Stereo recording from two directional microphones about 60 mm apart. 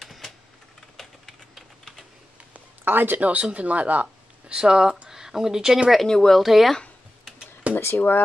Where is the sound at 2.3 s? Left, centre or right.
Right.